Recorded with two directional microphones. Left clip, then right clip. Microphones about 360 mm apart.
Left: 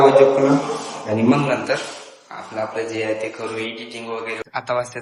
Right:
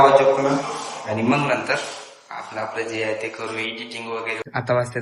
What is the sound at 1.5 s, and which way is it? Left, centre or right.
Speech, right.